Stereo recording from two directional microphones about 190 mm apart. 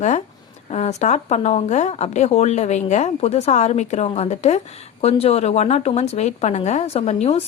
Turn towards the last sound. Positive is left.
turn(degrees=35)  # may be behind; listen again after turning